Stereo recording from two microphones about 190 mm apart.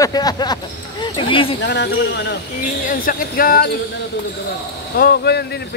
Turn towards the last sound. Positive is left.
turn(degrees=55)  # may be behind; listen again after turning